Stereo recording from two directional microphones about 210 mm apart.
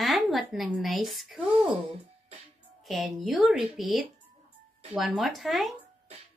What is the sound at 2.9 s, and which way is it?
A child's voice, centre (ahead or behind).